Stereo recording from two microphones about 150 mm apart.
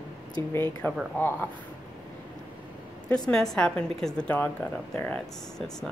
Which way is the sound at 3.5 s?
5° left (ahead or behind).